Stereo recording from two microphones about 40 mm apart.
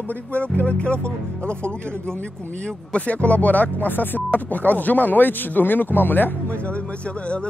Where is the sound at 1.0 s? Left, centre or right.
Right.